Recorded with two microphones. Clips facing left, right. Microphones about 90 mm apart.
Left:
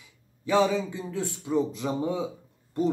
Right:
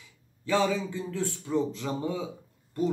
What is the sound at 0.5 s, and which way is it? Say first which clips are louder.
Speech: left 3 dB; 20° left (ahead or behind).